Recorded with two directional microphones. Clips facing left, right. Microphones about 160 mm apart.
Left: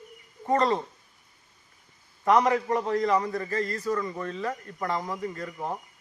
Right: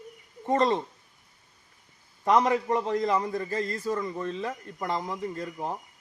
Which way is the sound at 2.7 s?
20° right (ahead or behind).